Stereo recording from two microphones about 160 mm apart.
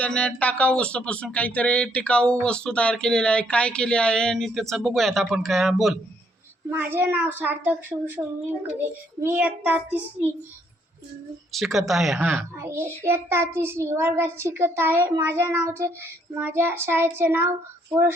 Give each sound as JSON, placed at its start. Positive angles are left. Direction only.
{"t": 0.0, "sound": "speech", "side_deg": 5}
{"t": 6.7, "sound": "a child's voice", "side_deg": -10}
{"t": 11.5, "sound": "speech", "side_deg": 0}
{"t": 12.5, "sound": "a child's voice", "side_deg": -15}